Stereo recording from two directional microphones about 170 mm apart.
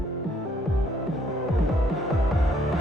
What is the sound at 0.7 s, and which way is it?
Music, centre (ahead or behind).